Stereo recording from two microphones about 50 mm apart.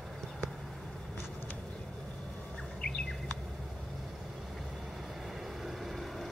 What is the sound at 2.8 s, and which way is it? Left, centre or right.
Bird, centre.